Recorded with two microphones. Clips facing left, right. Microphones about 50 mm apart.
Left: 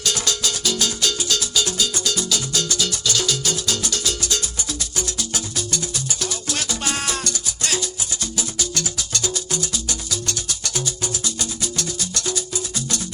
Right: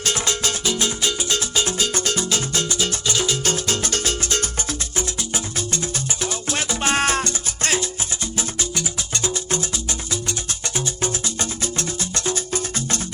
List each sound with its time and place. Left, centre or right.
0.0 s music: right
10.8 s music: right